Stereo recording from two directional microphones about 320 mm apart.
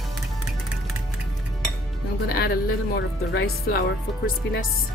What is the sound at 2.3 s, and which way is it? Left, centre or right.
Speech, left.